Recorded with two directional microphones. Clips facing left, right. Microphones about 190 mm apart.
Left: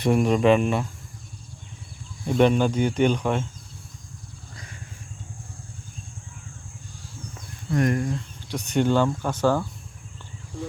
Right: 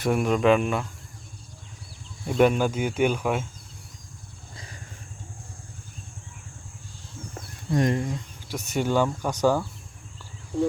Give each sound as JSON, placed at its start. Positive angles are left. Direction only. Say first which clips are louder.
{"t": 0.0, "sound": "speech", "louder": "left 2 dB", "side_deg": 0}
{"t": 2.2, "sound": "speech", "louder": "left 1 dB", "side_deg": -5}
{"t": 4.5, "sound": "a sound", "louder": "right 1 dB", "side_deg": -30}
{"t": 7.7, "sound": "speech", "louder": "left 1 dB", "side_deg": -25}
{"t": 8.4, "sound": "speech", "louder": "left 4 dB", "side_deg": -5}